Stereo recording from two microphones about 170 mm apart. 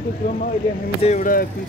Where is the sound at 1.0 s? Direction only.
45° left (ahead or behind).